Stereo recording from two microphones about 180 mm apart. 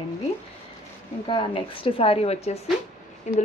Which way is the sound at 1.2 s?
30° left (ahead or behind).